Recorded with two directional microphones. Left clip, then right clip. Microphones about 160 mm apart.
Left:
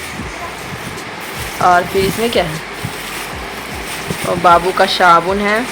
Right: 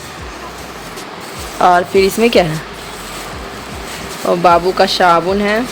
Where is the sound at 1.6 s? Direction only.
35° right (ahead or behind).